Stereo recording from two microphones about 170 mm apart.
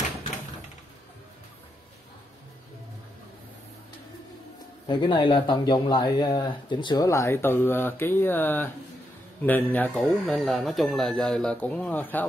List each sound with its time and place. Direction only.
4.8 s speech: 30° left (ahead or behind); by 12.3 s 10° left (ahead or behind)